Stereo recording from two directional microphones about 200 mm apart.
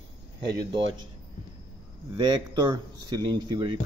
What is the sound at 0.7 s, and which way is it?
Speech, 25° right (ahead or behind).